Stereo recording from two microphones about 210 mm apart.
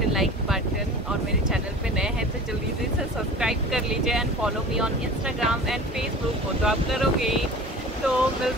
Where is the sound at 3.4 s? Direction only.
Centre (ahead or behind).